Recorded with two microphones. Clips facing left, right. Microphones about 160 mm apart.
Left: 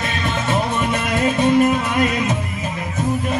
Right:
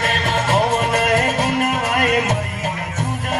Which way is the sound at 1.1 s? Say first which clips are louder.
Left 2 dB; 85° right.